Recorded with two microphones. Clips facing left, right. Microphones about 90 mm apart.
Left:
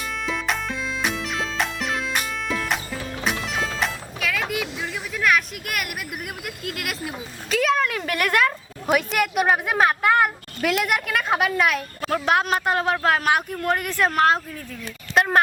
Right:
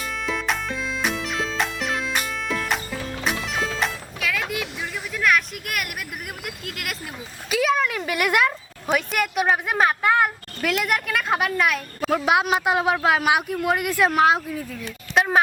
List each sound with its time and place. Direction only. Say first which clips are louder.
0.3 s music: right 1 dB; centre (ahead or behind)
6.4 s a woman's voice: left 2 dB; centre (ahead or behind)
8.9 s a woman's voice: left 2 dB; 5° left (ahead or behind)
15.1 s a sound: left 1 dB; centre (ahead or behind)